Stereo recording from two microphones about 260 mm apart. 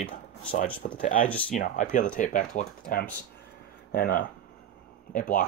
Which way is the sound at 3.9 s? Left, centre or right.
Left.